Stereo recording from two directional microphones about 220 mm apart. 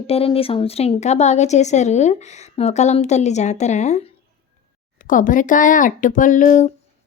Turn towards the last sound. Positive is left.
turn(degrees=35)  # may be behind; listen again after turning